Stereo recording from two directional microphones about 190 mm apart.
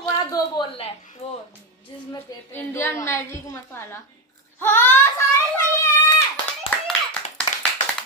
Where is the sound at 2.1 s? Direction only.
15° left (ahead or behind).